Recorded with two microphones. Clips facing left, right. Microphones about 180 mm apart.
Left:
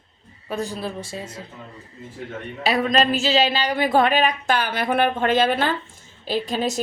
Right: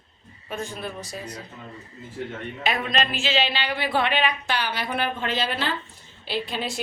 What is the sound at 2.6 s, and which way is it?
A woman's voice, 35° left (ahead or behind).